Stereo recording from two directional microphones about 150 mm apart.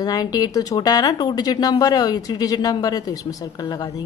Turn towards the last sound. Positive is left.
turn(degrees=25)  # may be behind; listen again after turning